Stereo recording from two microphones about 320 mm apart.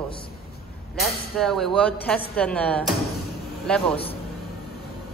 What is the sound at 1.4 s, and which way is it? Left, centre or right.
A woman's voice, centre.